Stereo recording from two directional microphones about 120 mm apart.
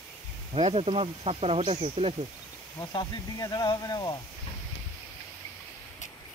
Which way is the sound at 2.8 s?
35° left (ahead or behind).